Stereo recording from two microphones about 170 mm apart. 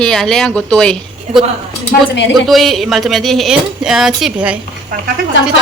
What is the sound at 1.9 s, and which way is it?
Speech, 60° left (ahead or behind).